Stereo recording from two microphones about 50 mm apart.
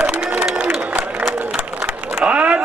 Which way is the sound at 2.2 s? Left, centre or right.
Right.